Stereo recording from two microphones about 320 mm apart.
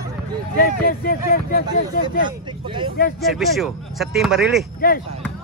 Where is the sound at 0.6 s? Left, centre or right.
Left.